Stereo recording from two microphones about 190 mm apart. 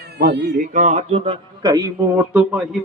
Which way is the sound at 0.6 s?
40° right (ahead or behind).